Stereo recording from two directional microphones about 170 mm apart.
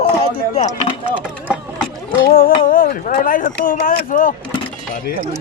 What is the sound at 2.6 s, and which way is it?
Speech, 55° left (ahead or behind).